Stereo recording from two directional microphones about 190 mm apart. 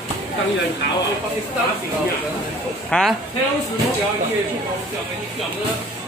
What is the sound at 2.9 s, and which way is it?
Speech, 5° left (ahead or behind).